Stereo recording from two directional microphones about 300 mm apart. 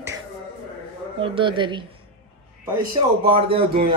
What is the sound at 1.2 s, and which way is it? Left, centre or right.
Speech, centre.